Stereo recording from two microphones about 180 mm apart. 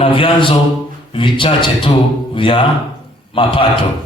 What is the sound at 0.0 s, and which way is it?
A man's voice, 30° left (ahead or behind).